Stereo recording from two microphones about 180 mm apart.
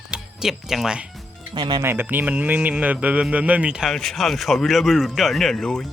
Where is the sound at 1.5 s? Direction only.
25° right (ahead or behind).